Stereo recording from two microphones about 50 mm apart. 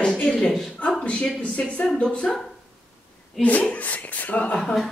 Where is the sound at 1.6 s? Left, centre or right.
Left.